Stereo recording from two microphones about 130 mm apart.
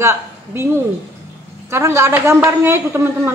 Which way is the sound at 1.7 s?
20° right (ahead or behind).